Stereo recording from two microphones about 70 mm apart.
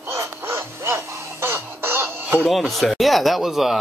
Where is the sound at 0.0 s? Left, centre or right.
Right.